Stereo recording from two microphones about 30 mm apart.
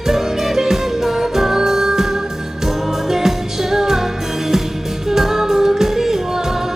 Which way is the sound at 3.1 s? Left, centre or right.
Centre.